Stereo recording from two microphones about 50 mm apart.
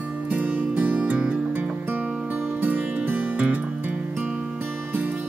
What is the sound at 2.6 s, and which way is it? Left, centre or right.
Music, right.